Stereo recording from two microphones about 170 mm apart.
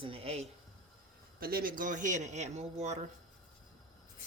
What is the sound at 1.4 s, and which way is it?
Speech, 60° right (ahead or behind).